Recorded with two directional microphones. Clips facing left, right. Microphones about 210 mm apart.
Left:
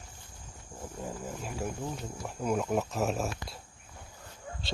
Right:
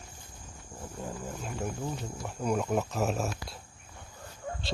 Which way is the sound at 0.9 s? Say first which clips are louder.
Even; 5° left (ahead or behind).